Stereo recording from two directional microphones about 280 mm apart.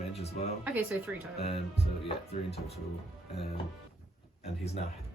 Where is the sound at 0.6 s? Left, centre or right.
Centre.